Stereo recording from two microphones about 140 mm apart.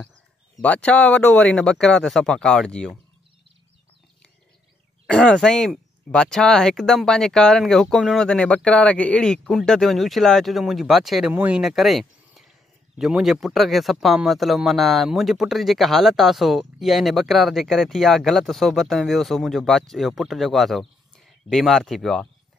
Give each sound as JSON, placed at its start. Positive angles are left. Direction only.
{"t": 0.6, "sound": "speech", "side_deg": 10}
{"t": 5.0, "sound": "speech", "side_deg": 5}